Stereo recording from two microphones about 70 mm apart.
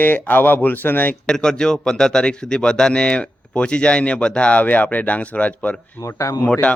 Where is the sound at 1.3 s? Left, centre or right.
Centre.